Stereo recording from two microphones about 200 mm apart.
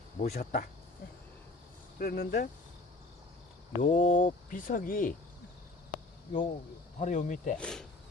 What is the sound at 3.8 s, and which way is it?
Speech, 35° left (ahead or behind).